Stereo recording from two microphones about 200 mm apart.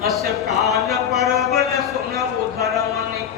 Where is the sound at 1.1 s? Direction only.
Centre (ahead or behind).